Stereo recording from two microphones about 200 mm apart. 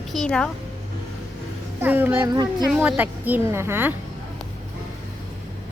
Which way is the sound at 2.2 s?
20° right (ahead or behind).